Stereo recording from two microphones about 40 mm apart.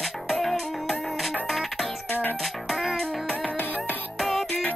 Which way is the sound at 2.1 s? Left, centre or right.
Left.